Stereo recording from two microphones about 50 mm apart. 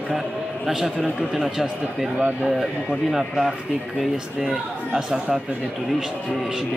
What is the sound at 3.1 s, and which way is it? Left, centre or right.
A man's voice, centre.